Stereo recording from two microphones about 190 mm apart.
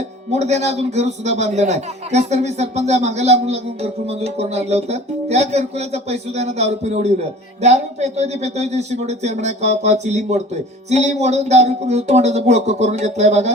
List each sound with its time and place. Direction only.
0.3 s a man's voice: 35° right (ahead or behind)